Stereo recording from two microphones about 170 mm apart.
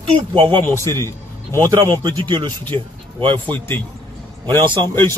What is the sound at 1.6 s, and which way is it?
Speech, 20° right (ahead or behind).